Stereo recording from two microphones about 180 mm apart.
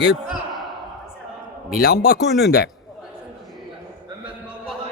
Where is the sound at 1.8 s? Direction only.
55° left (ahead or behind).